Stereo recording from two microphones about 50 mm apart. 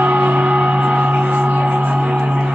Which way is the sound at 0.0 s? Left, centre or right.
Right.